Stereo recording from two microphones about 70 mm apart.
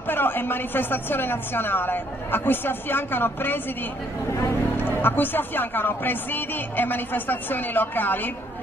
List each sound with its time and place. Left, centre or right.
0.1 s a woman's voice: left
4.7 s speech: left